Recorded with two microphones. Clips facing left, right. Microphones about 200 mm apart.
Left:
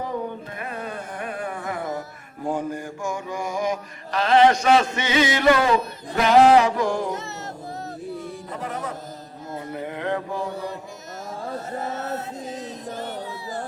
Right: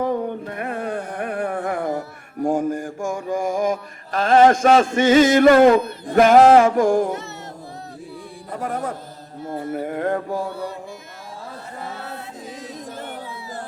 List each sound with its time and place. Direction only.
0.0 s music: 55° right (ahead or behind)
8.5 s music: 50° right (ahead or behind)
9.7 s a sound: 45° right (ahead or behind)
11.8 s chant: 45° left (ahead or behind)